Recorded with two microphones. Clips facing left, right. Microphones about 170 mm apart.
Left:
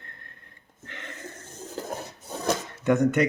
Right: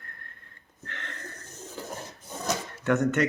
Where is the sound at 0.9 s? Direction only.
15° left (ahead or behind).